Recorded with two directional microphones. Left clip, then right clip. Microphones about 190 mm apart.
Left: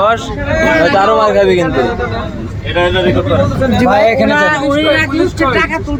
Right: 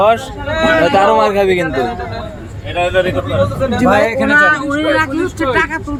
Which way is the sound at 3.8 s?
5° right (ahead or behind).